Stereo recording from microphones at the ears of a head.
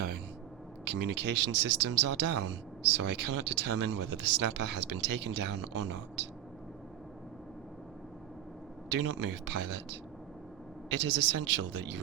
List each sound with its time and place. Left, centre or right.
0.9 s speech: right
8.9 s speech: right